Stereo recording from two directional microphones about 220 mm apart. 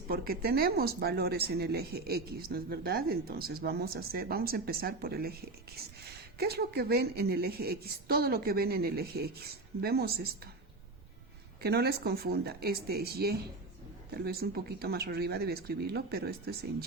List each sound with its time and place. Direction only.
0.1 s speech: 45° right (ahead or behind)
11.6 s speech: 45° right (ahead or behind)